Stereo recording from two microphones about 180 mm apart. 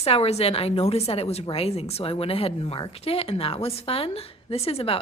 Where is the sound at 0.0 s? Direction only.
35° left (ahead or behind).